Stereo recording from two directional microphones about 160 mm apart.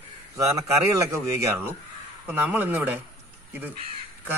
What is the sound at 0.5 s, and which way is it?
Speech, 20° right (ahead or behind).